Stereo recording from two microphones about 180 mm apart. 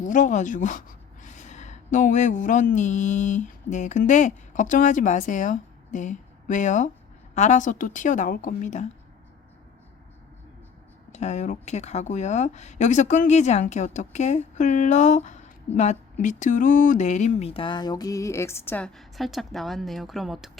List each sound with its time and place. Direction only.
0.0 s a woman's voice: 45° left (ahead or behind)
11.1 s speech: 40° left (ahead or behind); by 18.9 s 10° left (ahead or behind)
18.9 s speech: centre (ahead or behind)